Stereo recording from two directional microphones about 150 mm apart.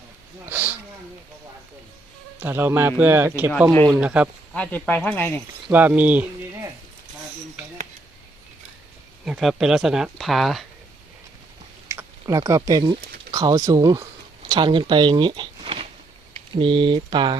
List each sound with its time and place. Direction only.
0.4 s speech: 10° right (ahead or behind)
2.4 s speech: 15° right (ahead or behind)
4.5 s speech: 10° left (ahead or behind)
5.7 s speech: 10° right (ahead or behind)
9.2 s speech: centre (ahead or behind)
11.9 s speech: 20° right (ahead or behind)